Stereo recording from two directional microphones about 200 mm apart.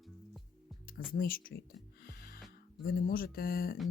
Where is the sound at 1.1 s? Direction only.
45° left (ahead or behind).